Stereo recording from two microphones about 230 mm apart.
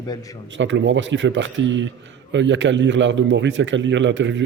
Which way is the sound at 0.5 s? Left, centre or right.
Right.